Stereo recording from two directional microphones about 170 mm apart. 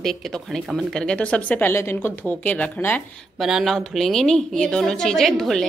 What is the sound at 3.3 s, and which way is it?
Speech, centre (ahead or behind).